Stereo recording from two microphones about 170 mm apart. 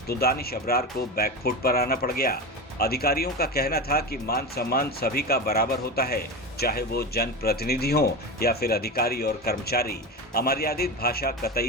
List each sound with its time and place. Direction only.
0.1 s speech: 65° left (ahead or behind)